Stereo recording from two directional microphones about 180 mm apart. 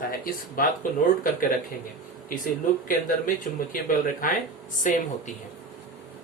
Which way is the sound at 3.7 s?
50° left (ahead or behind).